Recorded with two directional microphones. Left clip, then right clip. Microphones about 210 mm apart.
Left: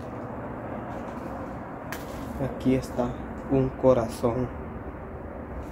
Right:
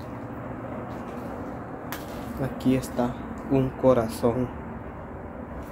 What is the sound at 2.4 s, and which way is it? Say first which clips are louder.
Speech: even; 15° right (ahead or behind).